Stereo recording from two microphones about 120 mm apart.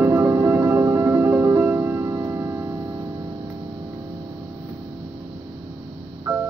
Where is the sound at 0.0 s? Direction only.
20° right (ahead or behind).